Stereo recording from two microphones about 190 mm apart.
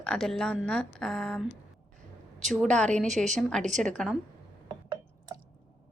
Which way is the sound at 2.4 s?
Centre (ahead or behind).